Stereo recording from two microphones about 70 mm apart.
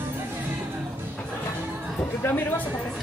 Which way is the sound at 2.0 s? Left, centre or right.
Left.